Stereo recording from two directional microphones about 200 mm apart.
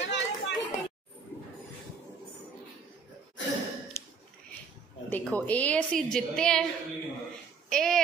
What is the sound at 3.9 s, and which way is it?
Dog, 10° left (ahead or behind).